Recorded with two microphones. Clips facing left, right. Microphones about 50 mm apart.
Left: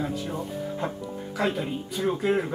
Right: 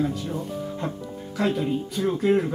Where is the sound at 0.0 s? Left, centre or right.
Centre.